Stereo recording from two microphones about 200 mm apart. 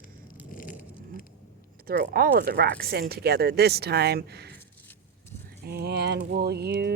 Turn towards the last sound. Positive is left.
turn(degrees=-55)  # may be behind; listen again after turning